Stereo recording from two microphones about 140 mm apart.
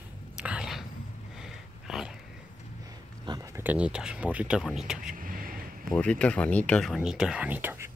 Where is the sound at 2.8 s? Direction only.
25° right (ahead or behind).